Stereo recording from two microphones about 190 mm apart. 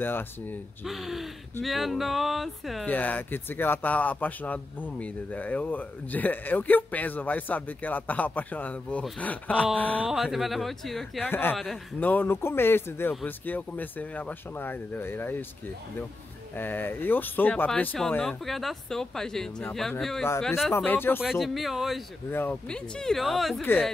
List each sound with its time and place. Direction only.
0.0 s speech: 10° left (ahead or behind)
0.8 s speech: centre (ahead or behind)
21.2 s speech: centre (ahead or behind)
22.3 s speech: 10° left (ahead or behind)